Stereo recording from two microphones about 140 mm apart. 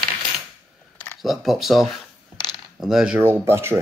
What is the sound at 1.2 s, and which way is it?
Speech, centre (ahead or behind).